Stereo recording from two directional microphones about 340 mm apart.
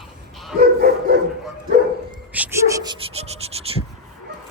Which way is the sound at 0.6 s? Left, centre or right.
Right.